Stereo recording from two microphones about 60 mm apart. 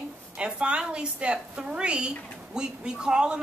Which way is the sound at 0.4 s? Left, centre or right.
Centre.